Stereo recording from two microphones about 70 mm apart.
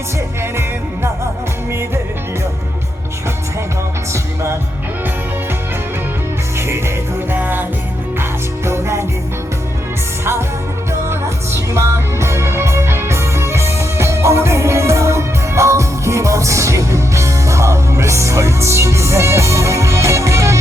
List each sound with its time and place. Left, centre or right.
6.6 s music: right
8.2 s music: right
11.1 s music: right